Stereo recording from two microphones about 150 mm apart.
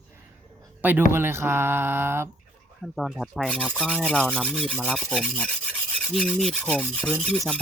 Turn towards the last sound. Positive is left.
turn(degrees=5)  # may be behind; listen again after turning